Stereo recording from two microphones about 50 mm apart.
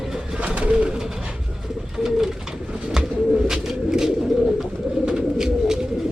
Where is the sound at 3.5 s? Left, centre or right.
Centre.